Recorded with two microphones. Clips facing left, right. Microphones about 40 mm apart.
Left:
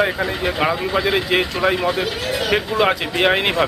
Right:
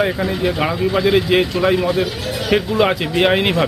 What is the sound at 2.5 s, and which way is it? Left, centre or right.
Speech, centre.